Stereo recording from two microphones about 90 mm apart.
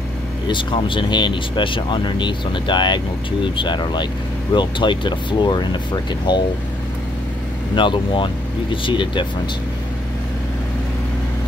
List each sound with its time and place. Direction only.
0.5 s speech: 65° left (ahead or behind)
7.7 s speech: 65° left (ahead or behind)